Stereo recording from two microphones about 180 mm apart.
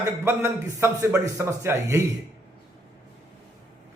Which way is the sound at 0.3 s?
15° right (ahead or behind).